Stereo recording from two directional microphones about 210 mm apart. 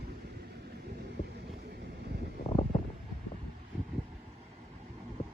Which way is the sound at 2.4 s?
25° left (ahead or behind).